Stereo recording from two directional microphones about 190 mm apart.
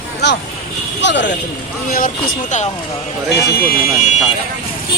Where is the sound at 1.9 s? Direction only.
45° left (ahead or behind).